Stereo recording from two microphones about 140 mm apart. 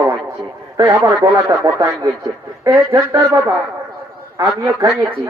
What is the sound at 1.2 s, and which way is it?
A man's voice, 25° right (ahead or behind).